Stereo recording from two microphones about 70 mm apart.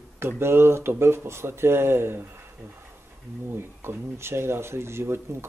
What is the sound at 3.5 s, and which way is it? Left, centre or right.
Speech, right.